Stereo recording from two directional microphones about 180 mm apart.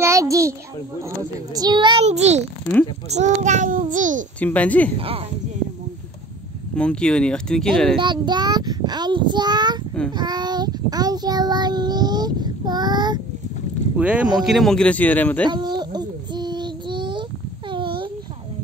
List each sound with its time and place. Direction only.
0.0 s a child's voice: 15° right (ahead or behind)
1.5 s child singing: 25° right (ahead or behind)
2.0 s a child's voice: 40° right (ahead or behind)
4.4 s a woman's voice: 10° left (ahead or behind)
4.9 s a child's voice: 30° right (ahead or behind)
6.7 s speech: 5° left (ahead or behind)
8.0 s child singing: 25° right (ahead or behind)
13.9 s speech: 5° right (ahead or behind); by 15.4 s 10° left (ahead or behind)
15.4 s a sound: 25° right (ahead or behind)